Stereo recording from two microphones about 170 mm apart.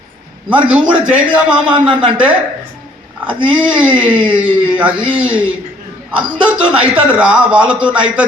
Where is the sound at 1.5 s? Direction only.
30° right (ahead or behind).